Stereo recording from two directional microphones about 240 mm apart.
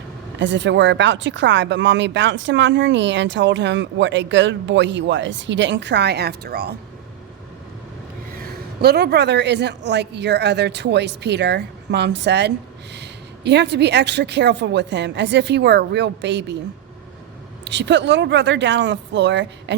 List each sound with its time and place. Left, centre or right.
0.3 s speech: right
8.8 s speech: right
17.7 s speech: right